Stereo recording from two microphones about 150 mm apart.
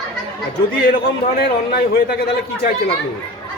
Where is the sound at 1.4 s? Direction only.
90° left.